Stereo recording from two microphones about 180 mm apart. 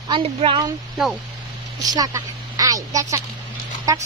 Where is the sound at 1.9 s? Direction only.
20° right (ahead or behind).